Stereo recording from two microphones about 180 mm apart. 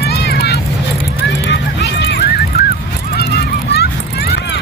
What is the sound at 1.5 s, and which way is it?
Run, 65° left (ahead or behind).